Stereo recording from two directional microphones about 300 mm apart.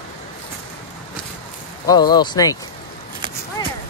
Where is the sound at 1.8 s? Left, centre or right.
Centre.